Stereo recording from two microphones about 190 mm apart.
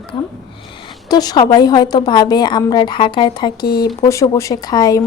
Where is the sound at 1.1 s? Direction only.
20° left (ahead or behind).